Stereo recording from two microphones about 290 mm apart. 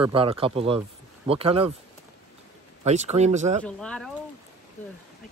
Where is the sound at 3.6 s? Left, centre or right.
Centre.